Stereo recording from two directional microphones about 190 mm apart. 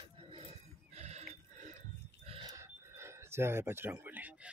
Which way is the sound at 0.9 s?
35° right (ahead or behind).